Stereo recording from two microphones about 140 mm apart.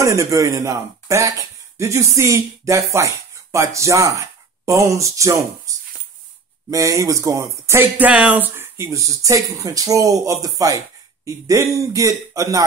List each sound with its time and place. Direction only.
0.0 s speech: 20° right (ahead or behind)
5.7 s a sound: 25° right (ahead or behind)
6.7 s speech: 25° right (ahead or behind)